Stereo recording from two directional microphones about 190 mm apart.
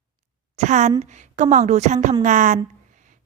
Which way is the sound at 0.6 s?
40° right (ahead or behind).